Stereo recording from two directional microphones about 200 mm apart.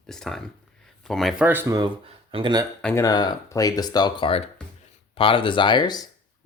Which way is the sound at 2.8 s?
15° left (ahead or behind).